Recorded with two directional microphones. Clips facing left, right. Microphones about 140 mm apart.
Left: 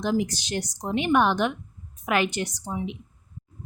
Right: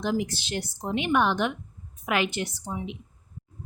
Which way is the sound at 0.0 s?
45° left (ahead or behind).